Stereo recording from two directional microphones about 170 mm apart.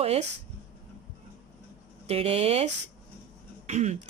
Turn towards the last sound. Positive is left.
turn(degrees=-40)  # may be behind; listen again after turning